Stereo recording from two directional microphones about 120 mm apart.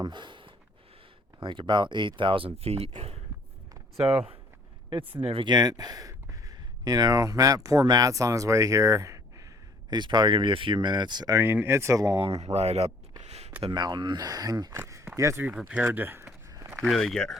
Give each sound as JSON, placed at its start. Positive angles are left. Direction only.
{"t": 0.0, "sound": "a sound", "side_deg": -40}
{"t": 1.4, "sound": "speech", "side_deg": -40}
{"t": 9.9, "sound": "speech", "side_deg": -40}
{"t": 11.3, "sound": "speech", "side_deg": -20}
{"t": 12.4, "sound": "speech", "side_deg": -65}
{"t": 13.2, "sound": "a sound", "side_deg": -60}
{"t": 13.6, "sound": "speech", "side_deg": -40}
{"t": 16.8, "sound": "speech", "side_deg": 0}